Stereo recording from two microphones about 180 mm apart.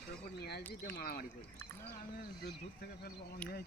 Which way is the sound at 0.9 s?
55° left (ahead or behind).